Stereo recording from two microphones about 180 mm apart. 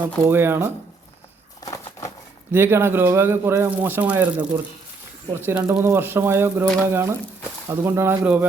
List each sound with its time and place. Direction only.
0.3 s speech: 10° right (ahead or behind)
1.6 s a sound: 20° left (ahead or behind)
2.5 s speech: 10° right (ahead or behind)